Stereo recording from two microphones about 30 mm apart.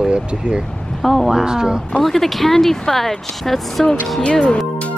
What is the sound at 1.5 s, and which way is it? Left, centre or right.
Speech, right.